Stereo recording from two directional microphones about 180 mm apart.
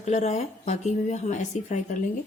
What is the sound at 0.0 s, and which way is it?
A woman's voice, 40° left (ahead or behind).